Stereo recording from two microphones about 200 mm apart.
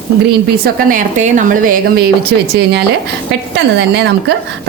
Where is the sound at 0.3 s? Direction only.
45° right (ahead or behind).